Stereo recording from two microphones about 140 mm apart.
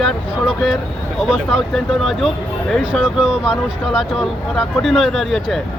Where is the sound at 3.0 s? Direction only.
5° right (ahead or behind).